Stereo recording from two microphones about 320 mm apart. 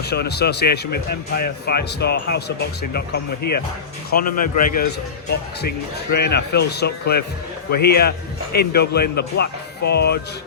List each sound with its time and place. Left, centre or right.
0.0 s speech: left
6.1 s speech: left